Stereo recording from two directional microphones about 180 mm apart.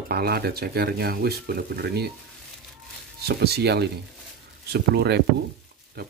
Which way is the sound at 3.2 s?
65° right (ahead or behind).